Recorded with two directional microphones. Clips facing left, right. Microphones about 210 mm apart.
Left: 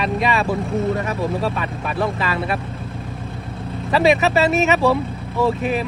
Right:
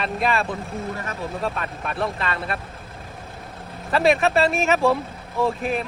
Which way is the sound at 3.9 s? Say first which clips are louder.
Left 2 dB; centre (ahead or behind).